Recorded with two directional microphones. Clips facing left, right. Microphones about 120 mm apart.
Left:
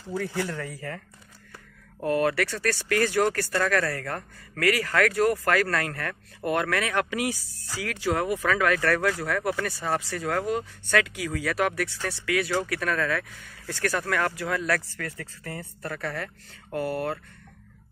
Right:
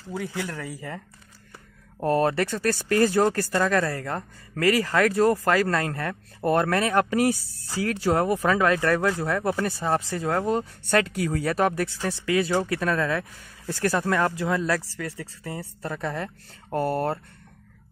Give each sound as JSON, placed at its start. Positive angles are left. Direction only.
{"t": 0.5, "sound": "speech", "side_deg": -5}
{"t": 2.0, "sound": "speech", "side_deg": -35}
{"t": 16.7, "sound": "speech", "side_deg": -35}